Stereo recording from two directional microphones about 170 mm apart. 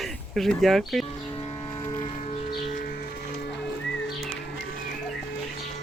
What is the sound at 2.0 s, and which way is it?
Music, 40° left (ahead or behind).